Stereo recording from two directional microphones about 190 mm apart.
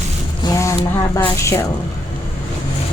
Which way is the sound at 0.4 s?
15° left (ahead or behind).